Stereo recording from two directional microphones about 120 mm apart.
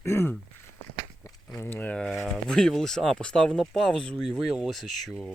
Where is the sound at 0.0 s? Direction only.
20° left (ahead or behind).